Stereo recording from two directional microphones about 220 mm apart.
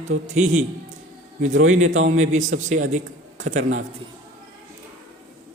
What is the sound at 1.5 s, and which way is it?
Speech, 65° right (ahead or behind).